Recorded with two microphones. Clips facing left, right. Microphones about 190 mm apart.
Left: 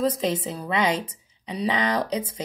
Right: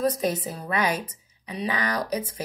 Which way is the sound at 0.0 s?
25° left (ahead or behind).